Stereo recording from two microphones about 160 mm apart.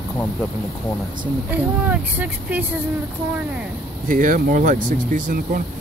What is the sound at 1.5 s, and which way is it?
Speech, 10° right (ahead or behind).